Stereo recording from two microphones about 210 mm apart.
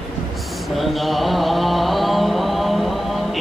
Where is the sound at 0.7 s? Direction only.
Centre (ahead or behind).